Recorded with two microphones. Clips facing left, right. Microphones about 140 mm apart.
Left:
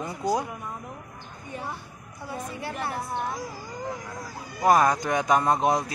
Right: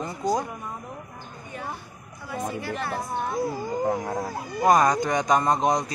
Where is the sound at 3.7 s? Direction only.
55° right (ahead or behind).